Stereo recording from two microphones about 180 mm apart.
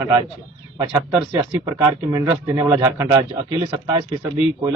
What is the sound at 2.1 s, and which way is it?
A man's voice, 20° right (ahead or behind).